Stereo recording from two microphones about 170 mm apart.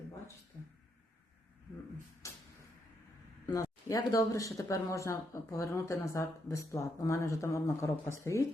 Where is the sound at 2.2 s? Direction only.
20° left (ahead or behind).